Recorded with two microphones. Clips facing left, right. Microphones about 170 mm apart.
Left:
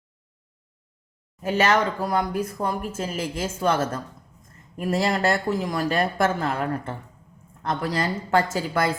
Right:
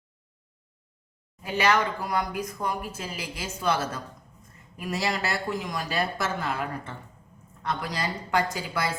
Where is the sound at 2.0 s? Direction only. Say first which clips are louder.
Left 4 dB; 30° left (ahead or behind).